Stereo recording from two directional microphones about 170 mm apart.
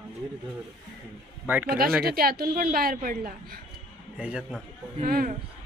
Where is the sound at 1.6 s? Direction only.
60° right (ahead or behind).